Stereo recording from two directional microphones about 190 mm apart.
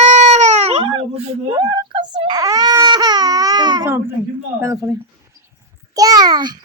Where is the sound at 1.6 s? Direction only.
20° right (ahead or behind).